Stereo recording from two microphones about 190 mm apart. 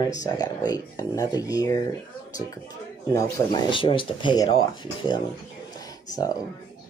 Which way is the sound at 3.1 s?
20° left (ahead or behind).